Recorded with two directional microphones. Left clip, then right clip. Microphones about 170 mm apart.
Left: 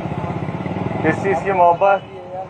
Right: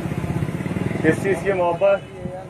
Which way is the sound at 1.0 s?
Centre (ahead or behind).